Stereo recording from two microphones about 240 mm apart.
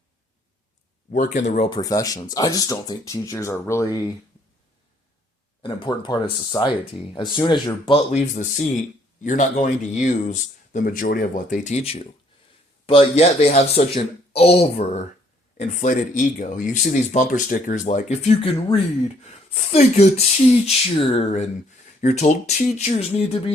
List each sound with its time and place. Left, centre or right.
1.1 s speech: left; by 3.8 s centre
5.6 s speech: centre